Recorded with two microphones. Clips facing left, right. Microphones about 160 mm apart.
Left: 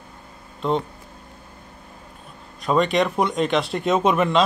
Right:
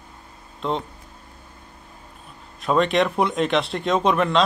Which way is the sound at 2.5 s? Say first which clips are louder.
Even; centre (ahead or behind).